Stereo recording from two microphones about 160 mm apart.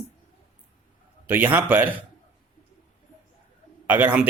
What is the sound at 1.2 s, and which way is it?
Speech, 10° right (ahead or behind).